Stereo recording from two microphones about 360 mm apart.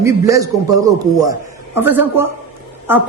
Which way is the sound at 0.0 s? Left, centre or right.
Centre.